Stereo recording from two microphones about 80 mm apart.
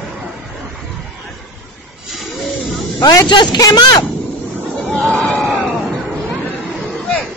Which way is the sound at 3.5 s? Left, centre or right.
Left.